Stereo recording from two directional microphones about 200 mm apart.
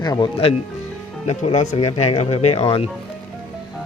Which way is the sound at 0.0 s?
20° left (ahead or behind).